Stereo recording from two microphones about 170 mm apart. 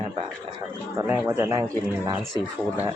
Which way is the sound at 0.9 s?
10° right (ahead or behind).